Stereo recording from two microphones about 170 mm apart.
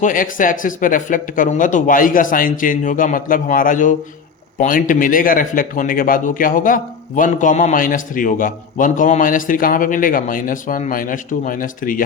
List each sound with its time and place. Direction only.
0.0 s a man's voice: 50° left (ahead or behind)